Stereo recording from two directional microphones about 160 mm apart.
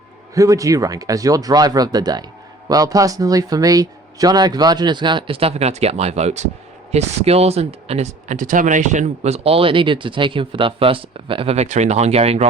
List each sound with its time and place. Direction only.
0.3 s speech: 20° right (ahead or behind); by 12.5 s 40° right (ahead or behind)